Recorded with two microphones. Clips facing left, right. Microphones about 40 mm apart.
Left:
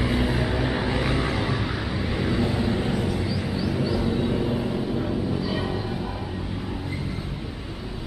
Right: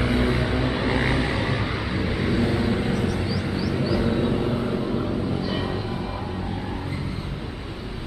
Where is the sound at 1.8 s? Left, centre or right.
Centre.